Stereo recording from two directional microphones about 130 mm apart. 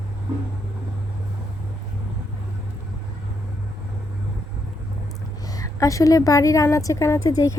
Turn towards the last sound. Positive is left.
turn(degrees=25)  # may be behind; listen again after turning